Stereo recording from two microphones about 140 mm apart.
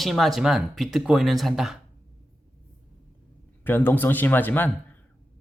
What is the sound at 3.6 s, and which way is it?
Speech, 15° left (ahead or behind).